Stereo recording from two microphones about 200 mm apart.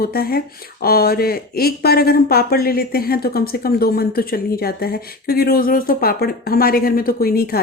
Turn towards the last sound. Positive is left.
turn(degrees=50)  # may be behind; listen again after turning